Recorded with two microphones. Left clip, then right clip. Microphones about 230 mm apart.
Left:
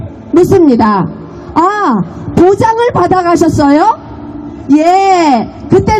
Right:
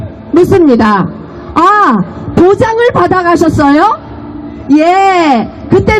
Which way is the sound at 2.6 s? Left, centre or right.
Left.